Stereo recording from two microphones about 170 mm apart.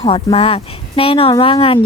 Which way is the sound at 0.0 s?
30° left (ahead or behind).